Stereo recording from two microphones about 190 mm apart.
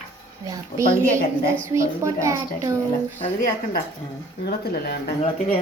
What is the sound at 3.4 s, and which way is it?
A woman's voice, 50° left (ahead or behind).